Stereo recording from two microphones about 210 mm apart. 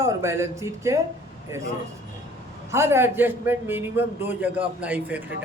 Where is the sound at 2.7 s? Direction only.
10° right (ahead or behind).